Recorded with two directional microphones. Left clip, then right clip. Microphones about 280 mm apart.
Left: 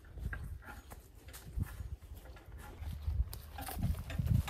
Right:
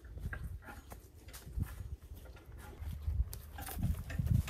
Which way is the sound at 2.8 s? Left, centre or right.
Left.